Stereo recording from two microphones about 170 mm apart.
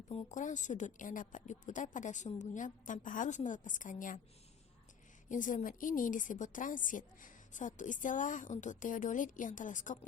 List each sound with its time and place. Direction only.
0.1 s a woman's voice: 40° left (ahead or behind)
5.3 s a woman's voice: 50° left (ahead or behind)